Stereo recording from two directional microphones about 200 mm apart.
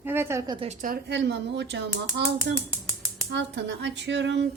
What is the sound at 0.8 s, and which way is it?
A woman's voice, 55° right (ahead or behind).